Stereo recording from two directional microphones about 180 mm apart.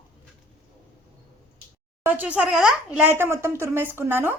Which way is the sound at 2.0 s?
10° right (ahead or behind).